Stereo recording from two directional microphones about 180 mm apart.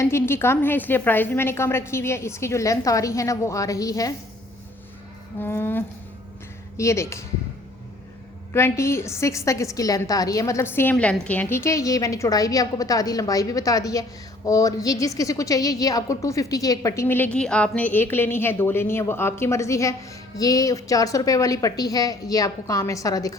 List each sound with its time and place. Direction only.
0.0 s a woman's voice: 15° left (ahead or behind)
5.4 s a woman's voice: 10° left (ahead or behind)
8.5 s a woman's voice: 15° left (ahead or behind)